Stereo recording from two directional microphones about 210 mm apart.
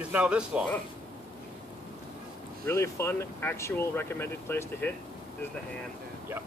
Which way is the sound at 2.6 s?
15° left (ahead or behind).